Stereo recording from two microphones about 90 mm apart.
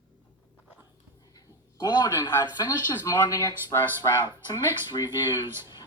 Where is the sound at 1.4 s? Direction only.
45° left (ahead or behind).